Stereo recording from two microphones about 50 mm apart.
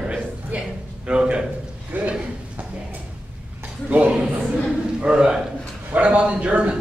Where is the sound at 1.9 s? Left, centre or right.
Right.